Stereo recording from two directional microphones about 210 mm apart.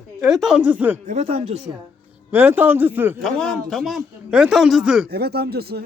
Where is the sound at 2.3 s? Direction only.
10° right (ahead or behind).